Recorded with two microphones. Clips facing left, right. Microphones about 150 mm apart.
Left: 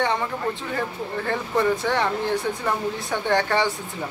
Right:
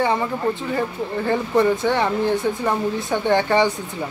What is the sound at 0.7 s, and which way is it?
Speech, 5° right (ahead or behind).